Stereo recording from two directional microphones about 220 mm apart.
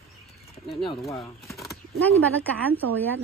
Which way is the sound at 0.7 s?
25° left (ahead or behind).